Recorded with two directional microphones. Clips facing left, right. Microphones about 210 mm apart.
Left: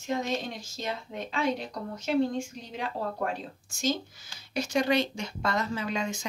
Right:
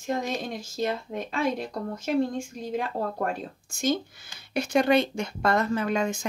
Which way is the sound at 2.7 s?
50° right (ahead or behind).